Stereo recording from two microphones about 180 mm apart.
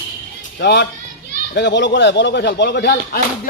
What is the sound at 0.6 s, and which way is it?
Speech, 70° left (ahead or behind).